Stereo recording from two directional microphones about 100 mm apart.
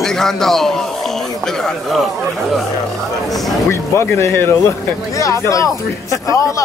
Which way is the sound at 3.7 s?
25° left (ahead or behind).